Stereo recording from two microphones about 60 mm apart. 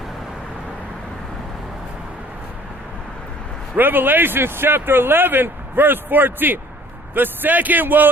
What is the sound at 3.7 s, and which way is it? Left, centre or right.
Speech, right.